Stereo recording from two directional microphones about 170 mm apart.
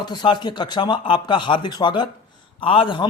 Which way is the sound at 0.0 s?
25° left (ahead or behind).